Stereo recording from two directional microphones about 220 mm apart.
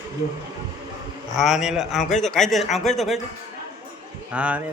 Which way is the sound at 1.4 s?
Centre (ahead or behind).